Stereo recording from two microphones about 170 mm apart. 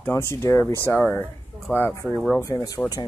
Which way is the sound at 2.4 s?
20° left (ahead or behind).